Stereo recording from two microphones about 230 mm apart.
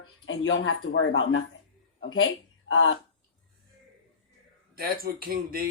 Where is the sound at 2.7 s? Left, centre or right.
Left.